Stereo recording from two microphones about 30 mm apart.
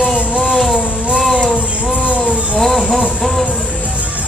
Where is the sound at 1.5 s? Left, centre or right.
Right.